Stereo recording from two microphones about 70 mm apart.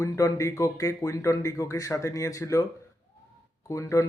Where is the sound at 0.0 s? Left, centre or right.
Left.